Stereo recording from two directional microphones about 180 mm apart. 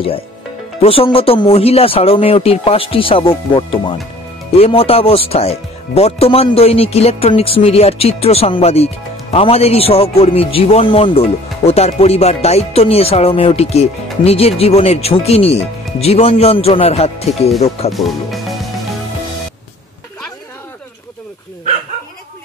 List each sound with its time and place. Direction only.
0.7 s speech: 30° left (ahead or behind)